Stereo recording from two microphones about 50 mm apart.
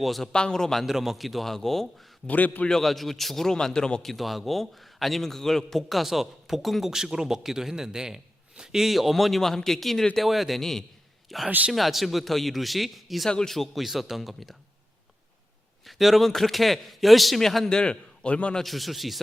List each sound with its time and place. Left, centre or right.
0.0 s a man's voice: centre
0.3 s speech: centre
0.9 s a man's voice: centre
2.2 s a man's voice: left
2.6 s speech: centre
4.0 s a man's voice: centre
15.8 s a man's voice: centre; by 18.6 s left
18.6 s a man's voice: centre